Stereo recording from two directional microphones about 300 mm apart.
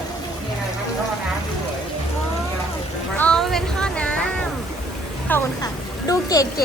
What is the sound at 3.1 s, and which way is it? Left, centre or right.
Music, centre.